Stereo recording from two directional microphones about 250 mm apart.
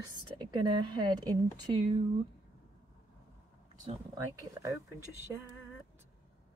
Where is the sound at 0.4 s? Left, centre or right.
Centre.